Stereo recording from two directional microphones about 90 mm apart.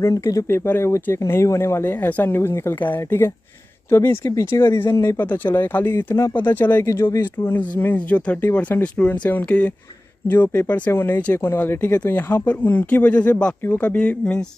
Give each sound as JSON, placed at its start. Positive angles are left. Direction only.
{"t": 0.0, "sound": "speech", "side_deg": 35}
{"t": 0.5, "sound": "speech", "side_deg": 25}
{"t": 6.9, "sound": "speech", "side_deg": 35}
{"t": 7.2, "sound": "speech", "side_deg": 20}